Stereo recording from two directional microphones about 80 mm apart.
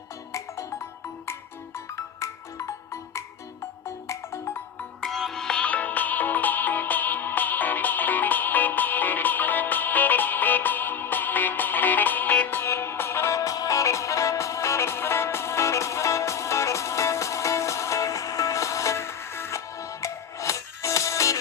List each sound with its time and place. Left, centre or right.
0.3 s music: left
5.0 s music: centre; by 21.3 s left